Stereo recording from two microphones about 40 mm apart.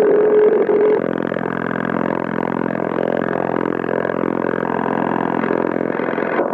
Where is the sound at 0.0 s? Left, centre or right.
Centre.